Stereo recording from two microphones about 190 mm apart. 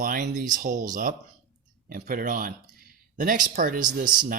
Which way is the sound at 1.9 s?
50° right (ahead or behind).